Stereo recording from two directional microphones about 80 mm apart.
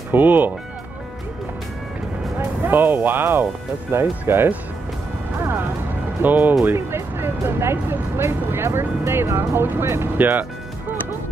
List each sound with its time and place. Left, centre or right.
0.1 s speech: right
2.3 s speech: right
5.4 s music: right
6.2 s speech: right